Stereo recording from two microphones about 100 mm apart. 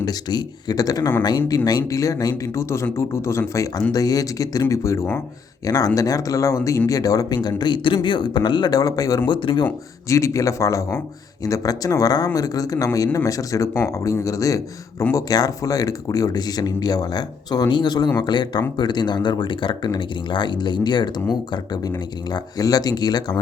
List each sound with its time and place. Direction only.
0.0 s speech: 45° left (ahead or behind)
9.3 s speech: 55° left (ahead or behind)
10.1 s speech: 30° left (ahead or behind)